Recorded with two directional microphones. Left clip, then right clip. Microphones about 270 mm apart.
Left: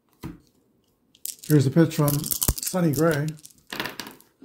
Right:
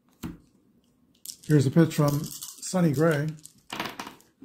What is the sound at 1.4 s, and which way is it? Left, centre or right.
Speech, centre.